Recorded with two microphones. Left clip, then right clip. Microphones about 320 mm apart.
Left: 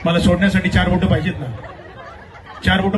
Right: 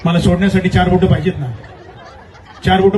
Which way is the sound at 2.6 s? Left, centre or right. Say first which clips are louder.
Right 6 dB; right.